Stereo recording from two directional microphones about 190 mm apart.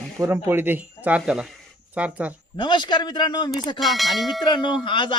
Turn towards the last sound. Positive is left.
turn(degrees=25)  # may be behind; listen again after turning